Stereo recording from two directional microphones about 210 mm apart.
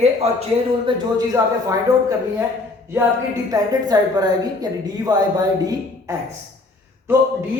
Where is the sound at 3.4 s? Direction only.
15° right (ahead or behind).